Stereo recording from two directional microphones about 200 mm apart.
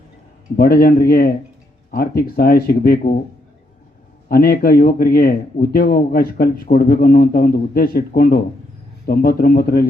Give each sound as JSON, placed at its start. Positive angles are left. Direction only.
{"t": 0.5, "sound": "a man's voice", "side_deg": 50}
{"t": 4.3, "sound": "a man's voice", "side_deg": 50}